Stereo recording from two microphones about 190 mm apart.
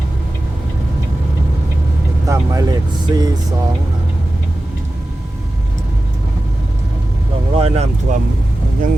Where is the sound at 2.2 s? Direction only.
15° right (ahead or behind).